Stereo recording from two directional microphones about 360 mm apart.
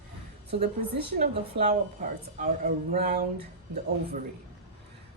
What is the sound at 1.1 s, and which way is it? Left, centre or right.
A woman's voice, centre.